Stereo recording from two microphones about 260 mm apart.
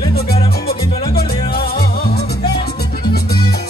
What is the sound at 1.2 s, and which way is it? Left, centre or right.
Music, left.